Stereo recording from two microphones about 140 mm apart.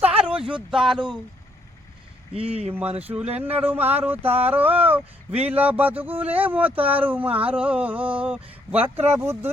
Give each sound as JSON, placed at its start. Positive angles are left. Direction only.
{"t": 0.2, "sound": "a sound", "side_deg": -5}
{"t": 0.7, "sound": "speech", "side_deg": -5}
{"t": 0.9, "sound": "speech", "side_deg": -35}
{"t": 2.5, "sound": "speech", "side_deg": -10}